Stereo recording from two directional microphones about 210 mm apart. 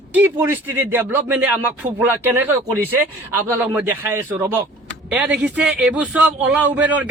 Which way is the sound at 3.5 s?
10° right (ahead or behind).